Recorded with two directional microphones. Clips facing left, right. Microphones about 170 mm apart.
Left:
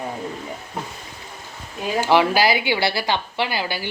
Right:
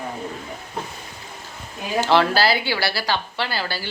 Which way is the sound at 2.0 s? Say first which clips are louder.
Left 1 dB; 15° left (ahead or behind).